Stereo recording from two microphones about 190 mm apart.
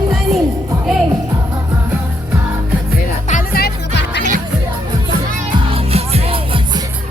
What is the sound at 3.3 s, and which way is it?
Music, 45° left (ahead or behind).